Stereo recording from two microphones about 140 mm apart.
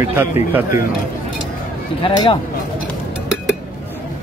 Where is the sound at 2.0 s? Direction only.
40° left (ahead or behind).